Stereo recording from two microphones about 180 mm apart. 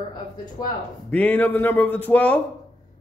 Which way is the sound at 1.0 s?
10° left (ahead or behind).